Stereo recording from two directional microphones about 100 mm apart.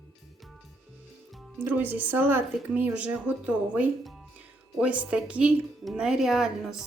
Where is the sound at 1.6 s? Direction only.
15° right (ahead or behind).